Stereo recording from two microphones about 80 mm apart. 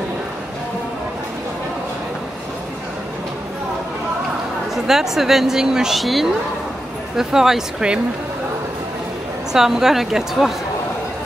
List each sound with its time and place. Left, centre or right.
4.7 s a woman's voice: centre
9.5 s a woman's voice: centre